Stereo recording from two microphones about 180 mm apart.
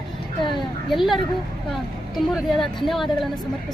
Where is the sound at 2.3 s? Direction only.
Centre (ahead or behind).